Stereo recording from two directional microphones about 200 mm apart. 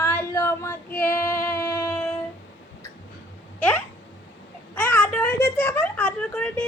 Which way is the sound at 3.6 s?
5° left (ahead or behind).